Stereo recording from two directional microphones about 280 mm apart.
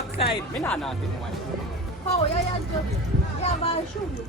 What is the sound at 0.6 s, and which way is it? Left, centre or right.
Speech, centre.